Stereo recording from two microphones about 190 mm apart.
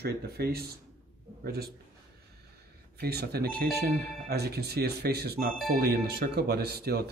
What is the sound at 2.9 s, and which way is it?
Speech, 55° right (ahead or behind).